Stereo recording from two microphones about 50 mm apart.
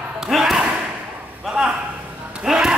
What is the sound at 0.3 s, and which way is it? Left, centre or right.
Slam, centre.